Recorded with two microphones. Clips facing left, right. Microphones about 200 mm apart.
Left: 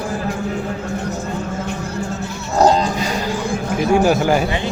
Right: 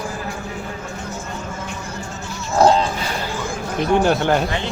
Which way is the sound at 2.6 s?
40° left (ahead or behind).